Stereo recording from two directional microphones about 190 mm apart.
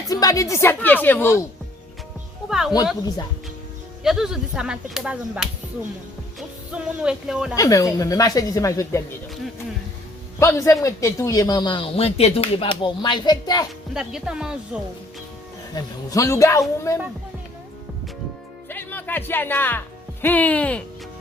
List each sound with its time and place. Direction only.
0.0 s a woman's voice: 20° left (ahead or behind)
2.5 s speech: centre (ahead or behind)
4.0 s speech: centre (ahead or behind)
6.7 s speech: 5° right (ahead or behind)
7.5 s a man's voice: 20° left (ahead or behind)
10.4 s a man's voice: 15° left (ahead or behind)
13.9 s speech: 5° right (ahead or behind)
15.7 s a man's voice: 20° left (ahead or behind)
18.7 s a man's voice: 10° left (ahead or behind)